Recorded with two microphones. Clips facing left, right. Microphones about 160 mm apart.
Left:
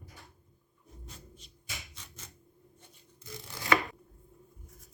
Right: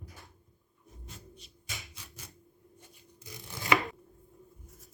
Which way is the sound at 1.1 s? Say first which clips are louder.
Right 2 dB; centre (ahead or behind).